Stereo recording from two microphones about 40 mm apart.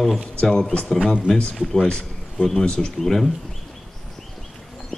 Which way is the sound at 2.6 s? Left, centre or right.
Left.